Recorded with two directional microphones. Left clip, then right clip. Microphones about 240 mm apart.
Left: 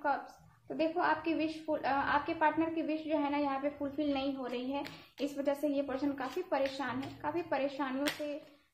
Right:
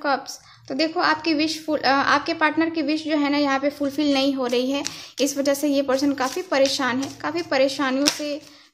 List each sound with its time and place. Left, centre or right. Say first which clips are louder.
0.7 s a woman's voice: right 10 dB; right